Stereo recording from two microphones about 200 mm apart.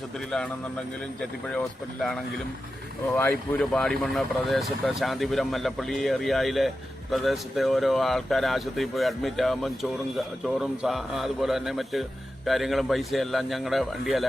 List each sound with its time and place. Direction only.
0.3 s speech: centre (ahead or behind)
3.2 s speech: 5° left (ahead or behind)